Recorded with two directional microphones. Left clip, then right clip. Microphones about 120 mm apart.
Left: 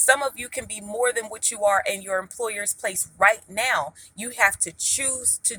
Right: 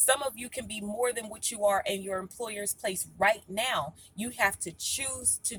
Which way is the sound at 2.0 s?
20° right (ahead or behind).